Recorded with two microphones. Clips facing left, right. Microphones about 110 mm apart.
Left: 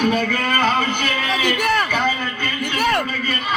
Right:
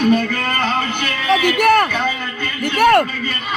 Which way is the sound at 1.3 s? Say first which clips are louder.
Right 8 dB; 55° right (ahead or behind).